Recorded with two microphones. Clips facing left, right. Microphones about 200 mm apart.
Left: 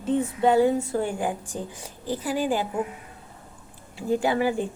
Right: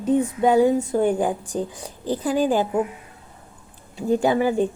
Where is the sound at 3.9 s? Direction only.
20° right (ahead or behind).